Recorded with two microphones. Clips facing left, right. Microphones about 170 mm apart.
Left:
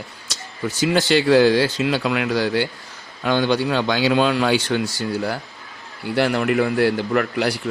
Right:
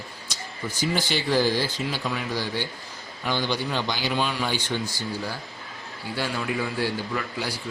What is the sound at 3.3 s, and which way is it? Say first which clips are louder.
A man's voice: left 8 dB; 65° left (ahead or behind).